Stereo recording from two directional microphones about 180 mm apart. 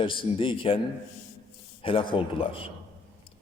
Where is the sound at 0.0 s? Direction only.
30° left (ahead or behind).